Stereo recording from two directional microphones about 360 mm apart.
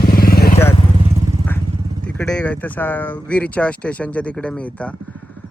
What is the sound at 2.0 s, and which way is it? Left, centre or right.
Speech, centre.